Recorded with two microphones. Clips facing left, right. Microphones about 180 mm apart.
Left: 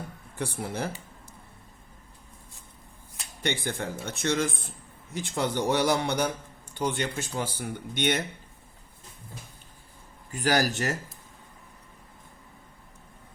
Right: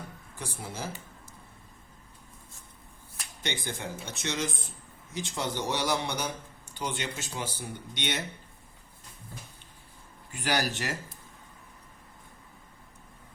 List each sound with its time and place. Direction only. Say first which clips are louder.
0.3 s speech: left 7 dB; 65° left (ahead or behind)
3.4 s speech: left 5 dB; 55° left (ahead or behind)
10.3 s speech: left 5 dB; 45° left (ahead or behind)